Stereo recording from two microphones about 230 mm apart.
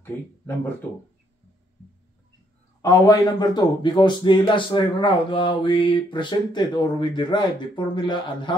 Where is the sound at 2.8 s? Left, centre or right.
Centre.